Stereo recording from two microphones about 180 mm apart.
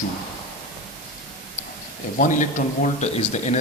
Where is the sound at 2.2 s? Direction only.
45° left (ahead or behind).